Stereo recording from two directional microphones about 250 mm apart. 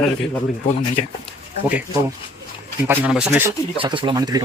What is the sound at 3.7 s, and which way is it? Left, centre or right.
Speech, centre.